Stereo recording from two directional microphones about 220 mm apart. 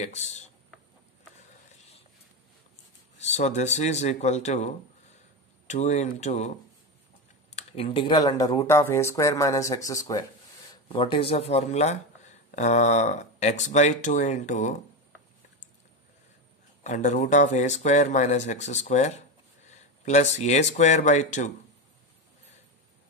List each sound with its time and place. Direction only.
0.0 s speech: 30° left (ahead or behind)
1.7 s a sound: 30° left (ahead or behind)
3.2 s speech: 30° left (ahead or behind)
5.7 s speech: 30° left (ahead or behind)
7.5 s speech: 25° left (ahead or behind)
16.8 s speech: 35° left (ahead or behind)